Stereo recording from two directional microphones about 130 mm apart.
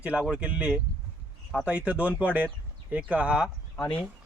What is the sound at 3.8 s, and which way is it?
Speech, 5° left (ahead or behind).